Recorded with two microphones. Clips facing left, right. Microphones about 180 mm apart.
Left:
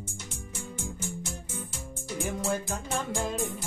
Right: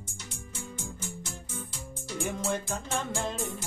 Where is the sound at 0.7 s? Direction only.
50° left (ahead or behind).